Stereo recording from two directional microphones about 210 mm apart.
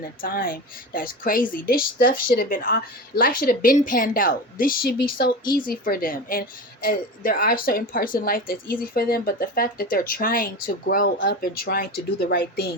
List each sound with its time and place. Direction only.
0.2 s speech: 45° left (ahead or behind)